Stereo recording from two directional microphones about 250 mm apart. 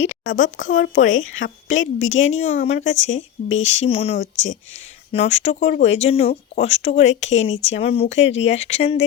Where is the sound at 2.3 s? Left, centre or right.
Left.